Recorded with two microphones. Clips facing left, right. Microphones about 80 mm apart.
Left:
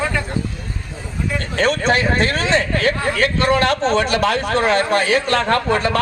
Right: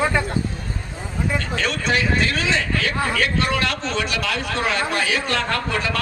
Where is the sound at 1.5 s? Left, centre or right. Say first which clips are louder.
Left 7 dB; left.